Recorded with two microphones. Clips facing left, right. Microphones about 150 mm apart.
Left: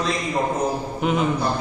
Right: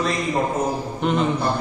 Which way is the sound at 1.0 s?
5° left (ahead or behind).